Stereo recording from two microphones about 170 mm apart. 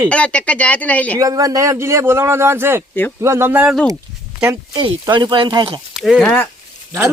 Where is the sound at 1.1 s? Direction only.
20° right (ahead or behind).